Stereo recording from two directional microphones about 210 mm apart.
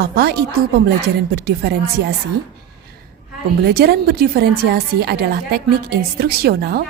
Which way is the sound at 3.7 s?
50° right (ahead or behind).